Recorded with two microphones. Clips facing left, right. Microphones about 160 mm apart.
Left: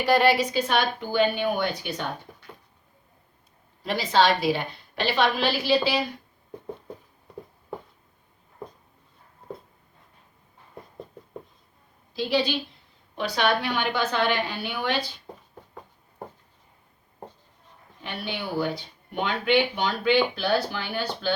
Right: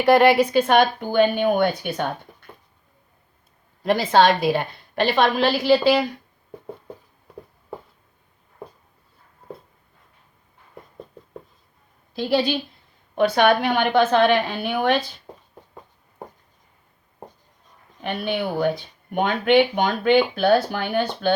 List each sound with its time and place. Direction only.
0.0 s speech: 55° right (ahead or behind)
3.8 s speech: 50° right (ahead or behind)
12.1 s speech: 50° right (ahead or behind)
18.0 s speech: 55° right (ahead or behind)